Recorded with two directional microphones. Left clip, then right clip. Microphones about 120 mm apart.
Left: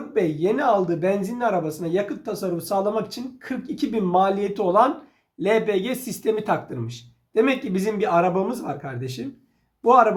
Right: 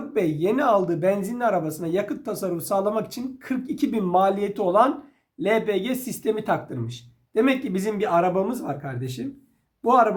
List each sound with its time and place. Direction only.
0.1 s speech: 50° right (ahead or behind); by 10.2 s 25° right (ahead or behind)